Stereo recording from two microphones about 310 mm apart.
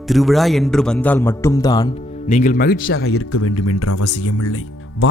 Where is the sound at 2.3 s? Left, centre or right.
Left.